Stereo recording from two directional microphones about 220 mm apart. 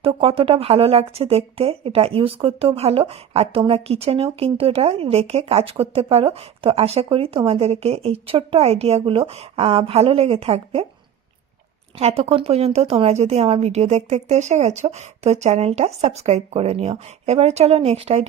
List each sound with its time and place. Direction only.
0.0 s speech: 25° right (ahead or behind)
11.9 s speech: 30° right (ahead or behind)